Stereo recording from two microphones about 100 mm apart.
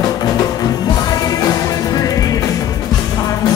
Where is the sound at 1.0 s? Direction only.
40° left (ahead or behind).